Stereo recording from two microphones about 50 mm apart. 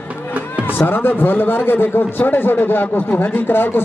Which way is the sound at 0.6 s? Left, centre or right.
Left.